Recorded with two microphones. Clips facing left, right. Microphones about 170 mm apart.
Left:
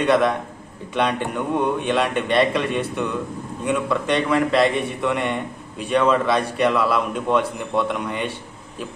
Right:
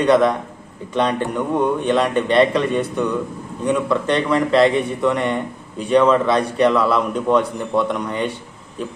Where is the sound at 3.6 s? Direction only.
10° left (ahead or behind).